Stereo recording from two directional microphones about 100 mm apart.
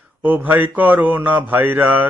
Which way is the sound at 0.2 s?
20° right (ahead or behind).